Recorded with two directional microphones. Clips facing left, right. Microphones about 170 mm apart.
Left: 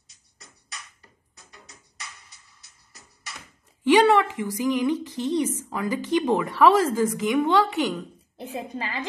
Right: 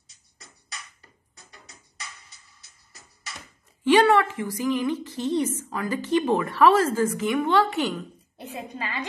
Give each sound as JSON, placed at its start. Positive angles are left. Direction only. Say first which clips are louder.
{"t": 3.8, "sound": "a woman's voice", "louder": "left 1 dB", "side_deg": 15}
{"t": 8.4, "sound": "a woman's voice", "louder": "left 2 dB", "side_deg": 30}